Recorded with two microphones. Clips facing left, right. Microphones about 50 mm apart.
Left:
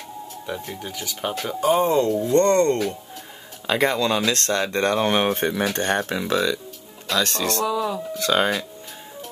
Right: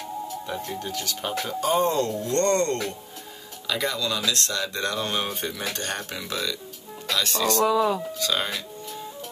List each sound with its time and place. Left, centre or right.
0.5 s speech: centre
3.6 s speech: left
7.5 s speech: right
8.3 s speech: left